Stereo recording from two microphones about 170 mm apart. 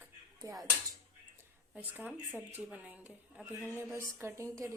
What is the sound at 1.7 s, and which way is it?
Speech, 10° right (ahead or behind).